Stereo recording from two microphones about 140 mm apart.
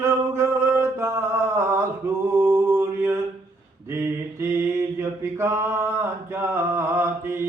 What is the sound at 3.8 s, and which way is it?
Mantra, 20° right (ahead or behind).